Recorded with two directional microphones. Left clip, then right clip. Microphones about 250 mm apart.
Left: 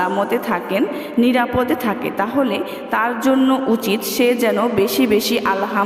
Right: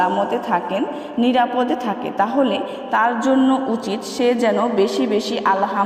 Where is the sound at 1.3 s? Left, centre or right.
Left.